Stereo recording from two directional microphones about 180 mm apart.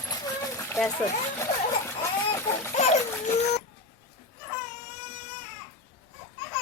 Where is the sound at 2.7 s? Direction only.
40° left (ahead or behind).